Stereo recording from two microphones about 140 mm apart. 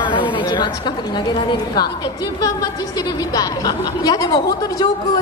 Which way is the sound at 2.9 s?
30° left (ahead or behind).